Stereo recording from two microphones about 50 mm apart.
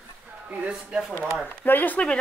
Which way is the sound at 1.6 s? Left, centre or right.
Left.